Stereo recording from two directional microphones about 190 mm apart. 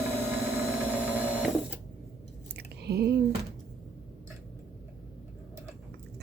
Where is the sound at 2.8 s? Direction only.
60° right (ahead or behind).